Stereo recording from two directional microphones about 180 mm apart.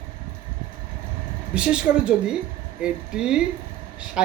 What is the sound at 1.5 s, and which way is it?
Speech, 5° right (ahead or behind).